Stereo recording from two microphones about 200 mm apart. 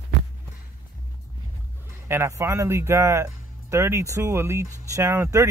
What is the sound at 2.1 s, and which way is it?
Speech, 15° right (ahead or behind).